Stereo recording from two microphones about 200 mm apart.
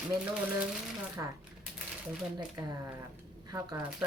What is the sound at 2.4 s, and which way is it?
Speech, 15° right (ahead or behind).